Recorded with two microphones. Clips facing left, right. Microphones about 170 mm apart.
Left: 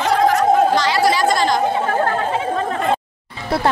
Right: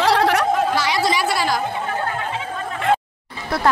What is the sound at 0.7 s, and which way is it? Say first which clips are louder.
Chatter: left 4 dB; 10° right (ahead or behind).